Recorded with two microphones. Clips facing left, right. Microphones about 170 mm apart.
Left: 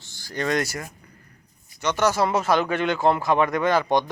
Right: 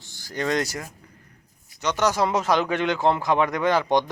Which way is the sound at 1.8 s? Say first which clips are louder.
Left 1 dB; 15° right (ahead or behind).